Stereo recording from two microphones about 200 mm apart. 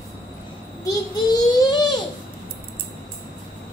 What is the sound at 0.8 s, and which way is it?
Child singing, 20° left (ahead or behind).